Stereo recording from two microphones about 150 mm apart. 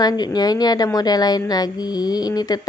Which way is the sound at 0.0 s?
25° left (ahead or behind).